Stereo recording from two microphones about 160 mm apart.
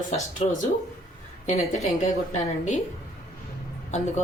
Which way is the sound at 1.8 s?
45° left (ahead or behind).